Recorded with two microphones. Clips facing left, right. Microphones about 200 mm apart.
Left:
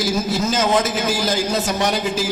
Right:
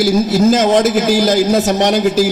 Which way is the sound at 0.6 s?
45° right (ahead or behind).